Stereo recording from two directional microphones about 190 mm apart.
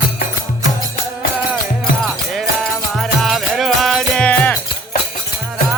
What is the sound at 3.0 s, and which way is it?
Music, centre (ahead or behind).